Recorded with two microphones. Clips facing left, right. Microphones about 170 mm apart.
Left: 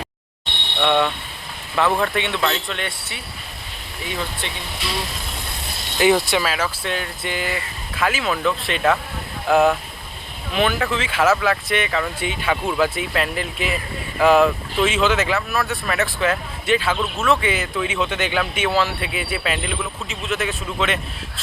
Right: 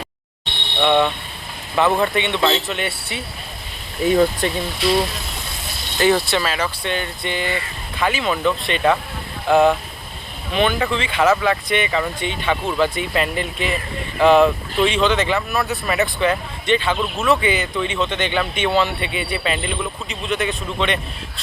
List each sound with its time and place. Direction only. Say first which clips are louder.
0.8 s speech: right 2 dB; centre (ahead or behind)
4.0 s speech: right 12 dB; 45° right (ahead or behind)
6.0 s speech: even; 15° left (ahead or behind)